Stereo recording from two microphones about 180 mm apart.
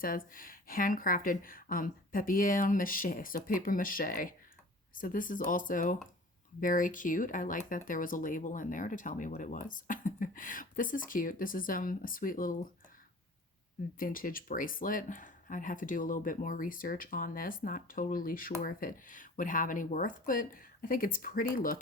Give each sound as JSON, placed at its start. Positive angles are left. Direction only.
{"t": 0.3, "sound": "speech", "side_deg": 50}
{"t": 14.0, "sound": "speech", "side_deg": 50}